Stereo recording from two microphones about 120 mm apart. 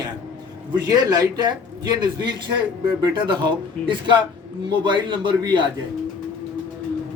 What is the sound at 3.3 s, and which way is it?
A man's voice, 45° right (ahead or behind).